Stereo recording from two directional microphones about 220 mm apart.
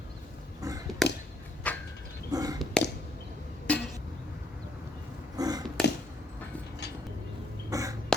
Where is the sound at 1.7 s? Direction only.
5° left (ahead or behind).